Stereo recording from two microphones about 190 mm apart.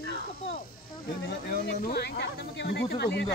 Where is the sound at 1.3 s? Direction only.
60° left (ahead or behind).